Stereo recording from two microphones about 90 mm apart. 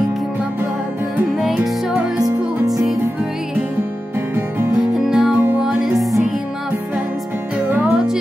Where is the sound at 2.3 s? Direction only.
45° right (ahead or behind).